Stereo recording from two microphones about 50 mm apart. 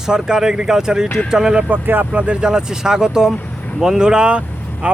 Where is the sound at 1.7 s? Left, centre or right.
Right.